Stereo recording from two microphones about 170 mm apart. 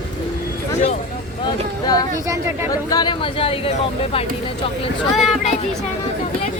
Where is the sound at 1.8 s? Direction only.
20° left (ahead or behind).